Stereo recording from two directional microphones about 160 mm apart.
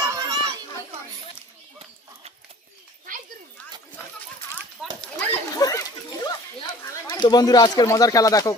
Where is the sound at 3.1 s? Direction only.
55° right (ahead or behind).